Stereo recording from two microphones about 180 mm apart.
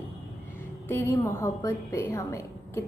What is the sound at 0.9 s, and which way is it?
A woman's voice, 15° left (ahead or behind).